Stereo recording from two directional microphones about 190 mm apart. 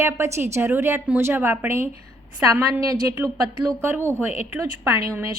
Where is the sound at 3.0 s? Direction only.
10° right (ahead or behind).